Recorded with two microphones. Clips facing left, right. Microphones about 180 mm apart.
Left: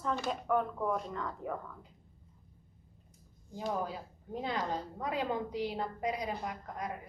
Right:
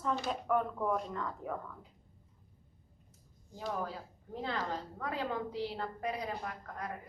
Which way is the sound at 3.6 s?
20° left (ahead or behind).